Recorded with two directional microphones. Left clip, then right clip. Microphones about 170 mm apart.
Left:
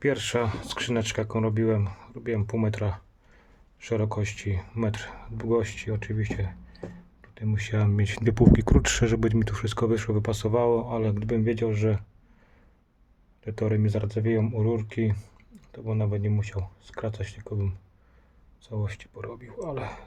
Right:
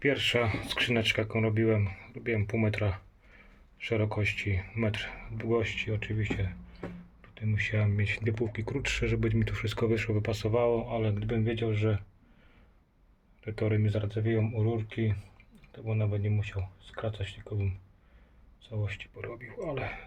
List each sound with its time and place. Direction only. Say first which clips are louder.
0.0 s speech: left 1 dB; 25° left (ahead or behind)
13.4 s speech: left 3 dB; 20° left (ahead or behind); by 17.7 s 40° left (ahead or behind)
18.7 s speech: left 2 dB; 35° left (ahead or behind)
19.2 s speech: left 3 dB; 15° left (ahead or behind)